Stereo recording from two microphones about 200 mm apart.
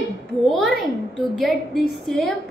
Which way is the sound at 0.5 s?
Centre (ahead or behind).